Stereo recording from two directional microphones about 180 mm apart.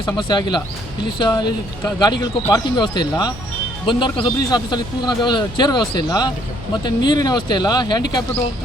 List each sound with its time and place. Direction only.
0.0 s a man's voice: 25° left (ahead or behind)